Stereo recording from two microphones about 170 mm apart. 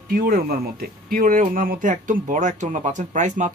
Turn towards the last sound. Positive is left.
turn(degrees=-45)  # may be behind; listen again after turning